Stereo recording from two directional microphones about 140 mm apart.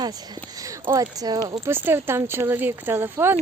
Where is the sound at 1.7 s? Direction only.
15° right (ahead or behind).